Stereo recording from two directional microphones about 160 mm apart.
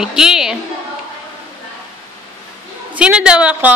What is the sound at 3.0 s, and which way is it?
Speech, 5° right (ahead or behind).